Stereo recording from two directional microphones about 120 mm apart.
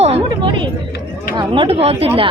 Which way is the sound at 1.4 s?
45° right (ahead or behind).